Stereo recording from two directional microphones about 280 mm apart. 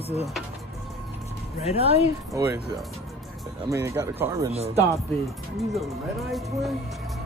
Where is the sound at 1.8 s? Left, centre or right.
Centre.